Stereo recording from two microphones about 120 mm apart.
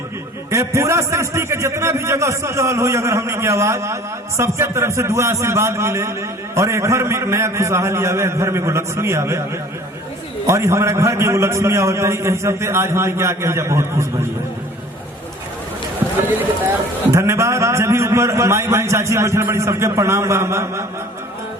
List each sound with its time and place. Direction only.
0.5 s a man's voice: 25° right (ahead or behind)
10.4 s a man's voice: 25° right (ahead or behind)
17.1 s a man's voice: 25° right (ahead or behind)